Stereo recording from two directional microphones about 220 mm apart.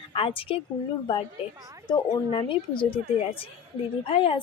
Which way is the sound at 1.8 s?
25° left (ahead or behind).